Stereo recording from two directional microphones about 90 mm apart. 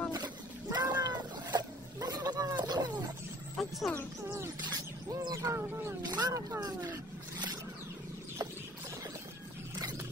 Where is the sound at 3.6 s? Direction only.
5° left (ahead or behind).